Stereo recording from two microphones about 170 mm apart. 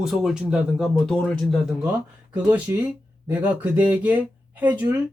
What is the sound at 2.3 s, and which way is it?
Speech, 10° right (ahead or behind).